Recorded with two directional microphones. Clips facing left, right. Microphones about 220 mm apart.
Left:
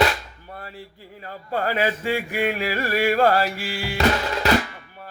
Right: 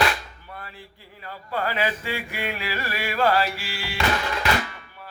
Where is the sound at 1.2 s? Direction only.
45° left (ahead or behind).